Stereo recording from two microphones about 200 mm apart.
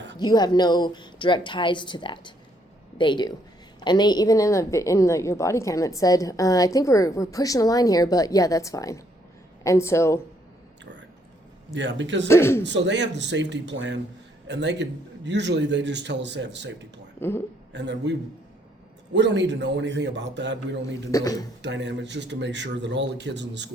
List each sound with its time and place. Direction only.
0.2 s a woman's voice: 20° left (ahead or behind)
11.7 s a man's voice: 65° right (ahead or behind)
12.3 s a woman's voice: 10° left (ahead or behind)
12.6 s a man's voice: 60° right (ahead or behind)
17.2 s speech: 10° left (ahead or behind)
17.7 s a man's voice: 60° right (ahead or behind)
21.1 s a woman's voice: 15° left (ahead or behind)
21.6 s a man's voice: 60° right (ahead or behind)